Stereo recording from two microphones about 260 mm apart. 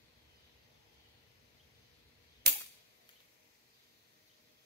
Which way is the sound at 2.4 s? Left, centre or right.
Right.